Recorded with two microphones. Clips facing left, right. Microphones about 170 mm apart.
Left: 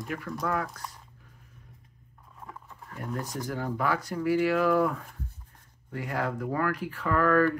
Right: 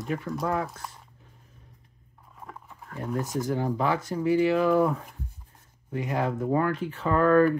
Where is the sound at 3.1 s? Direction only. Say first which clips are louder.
Right 6 dB; 20° right (ahead or behind).